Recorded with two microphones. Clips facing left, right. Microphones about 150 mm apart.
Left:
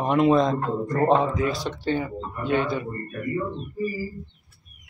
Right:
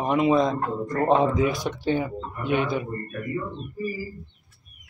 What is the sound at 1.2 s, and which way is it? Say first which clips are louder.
A man's voice: right 2 dB; 15° right (ahead or behind).